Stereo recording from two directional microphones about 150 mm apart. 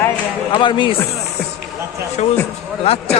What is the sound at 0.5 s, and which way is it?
Speech, 35° left (ahead or behind).